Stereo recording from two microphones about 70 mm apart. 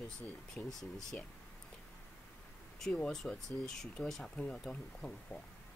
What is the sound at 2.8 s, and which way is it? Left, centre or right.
Speech, centre.